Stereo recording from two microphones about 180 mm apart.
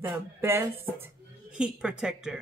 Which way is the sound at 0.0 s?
15° right (ahead or behind).